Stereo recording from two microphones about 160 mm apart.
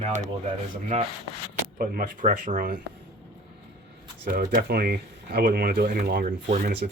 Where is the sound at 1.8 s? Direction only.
60° right (ahead or behind).